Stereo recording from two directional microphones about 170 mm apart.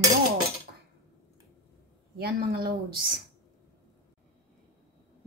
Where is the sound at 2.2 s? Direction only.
65° right (ahead or behind).